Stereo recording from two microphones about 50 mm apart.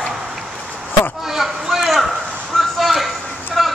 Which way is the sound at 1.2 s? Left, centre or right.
Centre.